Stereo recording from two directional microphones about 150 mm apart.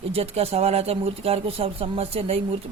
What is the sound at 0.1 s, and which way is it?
Speech, 40° right (ahead or behind).